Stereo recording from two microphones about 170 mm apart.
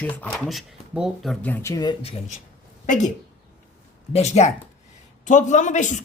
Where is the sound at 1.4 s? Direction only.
15° left (ahead or behind).